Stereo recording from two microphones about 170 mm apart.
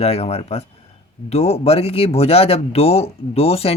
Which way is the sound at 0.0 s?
35° left (ahead or behind).